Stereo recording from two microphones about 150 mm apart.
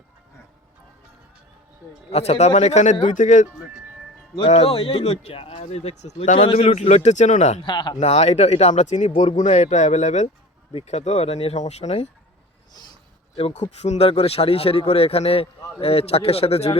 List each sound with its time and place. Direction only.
2.1 s speech: 45° left (ahead or behind)
4.4 s speech: 40° left (ahead or behind)
7.6 s a man's voice: 30° left (ahead or behind)
7.9 s speech: 45° left (ahead or behind)
12.7 s a sound: 30° left (ahead or behind)
13.3 s a man's voice: 45° left (ahead or behind)